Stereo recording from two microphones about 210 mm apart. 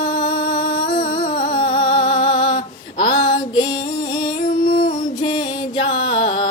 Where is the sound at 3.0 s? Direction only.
20° left (ahead or behind).